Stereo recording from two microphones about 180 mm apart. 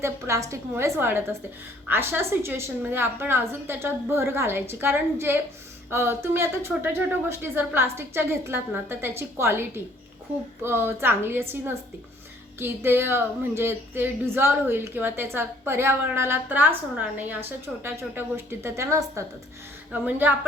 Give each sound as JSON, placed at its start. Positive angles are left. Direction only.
{"t": 0.0, "sound": "a woman's voice", "side_deg": -15}
{"t": 17.8, "sound": "a woman's voice", "side_deg": -10}